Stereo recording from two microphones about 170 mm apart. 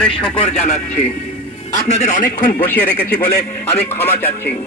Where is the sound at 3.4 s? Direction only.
40° left (ahead or behind).